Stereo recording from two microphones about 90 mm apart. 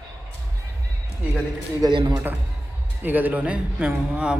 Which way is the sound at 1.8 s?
50° right (ahead or behind).